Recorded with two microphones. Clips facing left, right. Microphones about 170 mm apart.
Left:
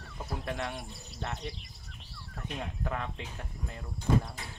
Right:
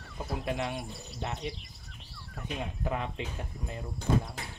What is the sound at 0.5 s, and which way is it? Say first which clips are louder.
Speech: right 3 dB; 20° right (ahead or behind).